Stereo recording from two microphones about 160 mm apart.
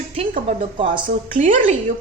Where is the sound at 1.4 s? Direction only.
50° right (ahead or behind).